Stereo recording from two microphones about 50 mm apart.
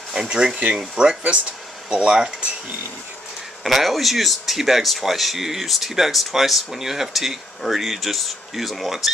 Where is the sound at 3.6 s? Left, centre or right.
Centre.